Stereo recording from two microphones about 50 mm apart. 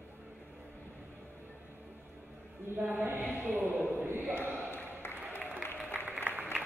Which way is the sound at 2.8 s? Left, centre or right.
Right.